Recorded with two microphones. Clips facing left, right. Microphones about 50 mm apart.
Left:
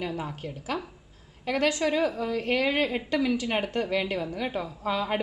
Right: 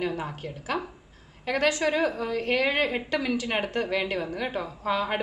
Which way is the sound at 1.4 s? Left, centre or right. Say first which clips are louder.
Right 1 dB; centre.